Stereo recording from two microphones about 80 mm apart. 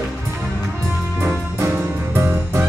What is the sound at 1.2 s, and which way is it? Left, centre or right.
Music, right.